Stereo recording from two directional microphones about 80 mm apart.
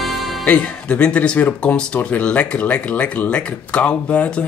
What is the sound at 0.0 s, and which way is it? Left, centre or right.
Music, centre.